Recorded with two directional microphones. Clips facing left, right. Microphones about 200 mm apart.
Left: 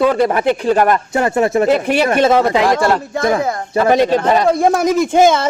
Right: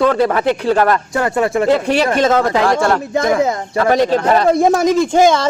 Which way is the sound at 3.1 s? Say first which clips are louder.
Right 2 dB; 20° right (ahead or behind).